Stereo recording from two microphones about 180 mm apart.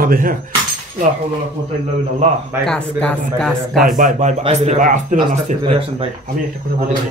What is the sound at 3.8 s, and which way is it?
Speech, 45° right (ahead or behind).